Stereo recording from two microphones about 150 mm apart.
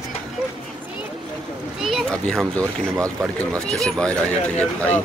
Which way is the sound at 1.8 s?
Centre (ahead or behind).